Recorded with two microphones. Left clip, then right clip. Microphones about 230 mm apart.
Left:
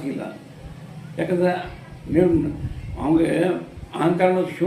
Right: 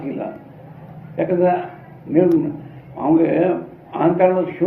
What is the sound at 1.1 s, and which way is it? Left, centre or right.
Speech, left.